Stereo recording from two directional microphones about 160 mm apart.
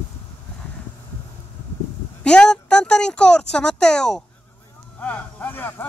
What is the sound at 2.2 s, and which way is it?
Speech, 5° left (ahead or behind).